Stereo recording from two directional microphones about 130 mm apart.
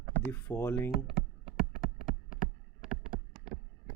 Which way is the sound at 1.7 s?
90° left.